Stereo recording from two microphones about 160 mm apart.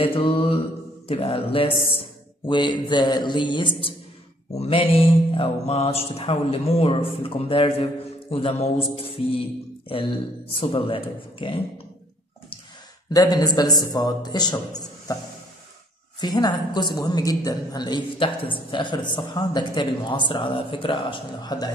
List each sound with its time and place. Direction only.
0.0 s speech: 35° left (ahead or behind)
13.1 s a woman's voice: 20° left (ahead or behind)
16.2 s a woman's voice: 25° left (ahead or behind)